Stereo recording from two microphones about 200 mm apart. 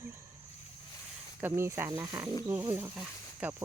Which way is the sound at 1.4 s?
10° right (ahead or behind).